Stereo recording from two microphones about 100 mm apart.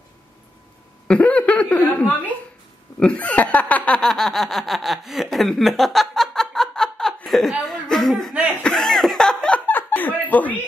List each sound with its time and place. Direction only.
1.0 s a sound: 10° left (ahead or behind)
3.0 s speech: 15° left (ahead or behind)
7.2 s chuckle: centre (ahead or behind)
8.6 s laughter: 5° left (ahead or behind)
9.7 s chuckle: 20° left (ahead or behind)